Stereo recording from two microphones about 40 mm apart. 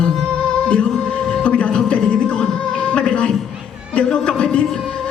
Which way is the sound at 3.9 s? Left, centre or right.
Left.